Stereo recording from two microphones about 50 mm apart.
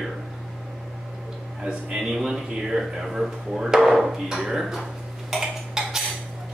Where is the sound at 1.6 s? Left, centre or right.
Centre.